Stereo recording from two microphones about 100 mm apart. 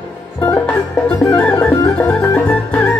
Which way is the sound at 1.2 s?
10° left (ahead or behind).